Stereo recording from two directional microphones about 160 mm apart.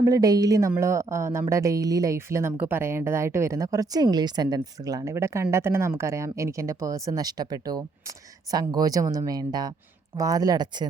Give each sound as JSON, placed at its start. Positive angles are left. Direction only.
{"t": 0.0, "sound": "speech", "side_deg": -20}